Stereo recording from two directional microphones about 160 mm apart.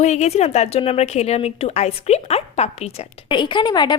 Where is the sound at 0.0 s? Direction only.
45° left (ahead or behind).